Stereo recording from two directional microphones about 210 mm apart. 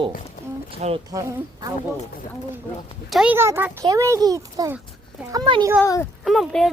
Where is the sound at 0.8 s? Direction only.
35° right (ahead or behind).